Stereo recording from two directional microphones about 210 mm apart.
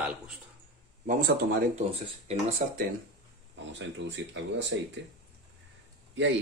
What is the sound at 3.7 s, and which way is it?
Speech, 60° right (ahead or behind).